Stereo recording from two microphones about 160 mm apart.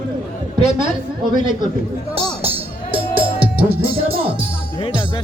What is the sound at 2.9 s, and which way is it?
Music, 35° right (ahead or behind).